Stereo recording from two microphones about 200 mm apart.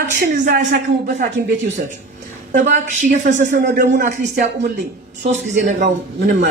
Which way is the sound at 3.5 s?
60° right (ahead or behind).